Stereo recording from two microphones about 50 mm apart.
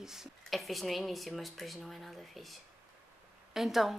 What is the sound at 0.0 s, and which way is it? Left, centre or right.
Speech, centre.